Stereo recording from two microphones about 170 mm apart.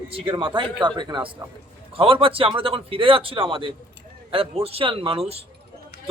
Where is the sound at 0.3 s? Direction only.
30° right (ahead or behind).